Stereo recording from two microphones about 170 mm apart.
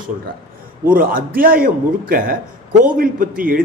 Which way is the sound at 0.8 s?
55° right (ahead or behind).